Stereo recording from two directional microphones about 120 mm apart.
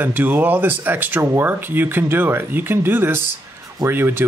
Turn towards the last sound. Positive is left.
turn(degrees=-20)  # may be behind; listen again after turning